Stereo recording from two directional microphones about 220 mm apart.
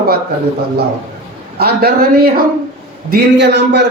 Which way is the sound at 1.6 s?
45° right (ahead or behind).